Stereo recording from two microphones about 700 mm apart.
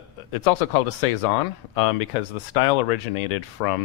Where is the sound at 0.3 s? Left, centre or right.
Left.